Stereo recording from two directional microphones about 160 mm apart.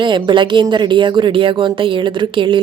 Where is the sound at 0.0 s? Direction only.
30° right (ahead or behind).